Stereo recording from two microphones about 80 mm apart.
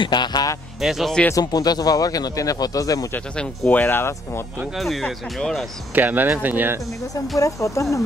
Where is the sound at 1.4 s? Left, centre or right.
Left.